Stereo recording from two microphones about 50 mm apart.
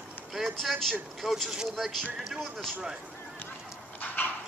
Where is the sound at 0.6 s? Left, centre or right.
Centre.